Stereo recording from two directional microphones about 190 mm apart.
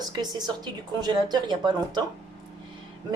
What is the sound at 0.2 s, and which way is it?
Speech, 20° right (ahead or behind).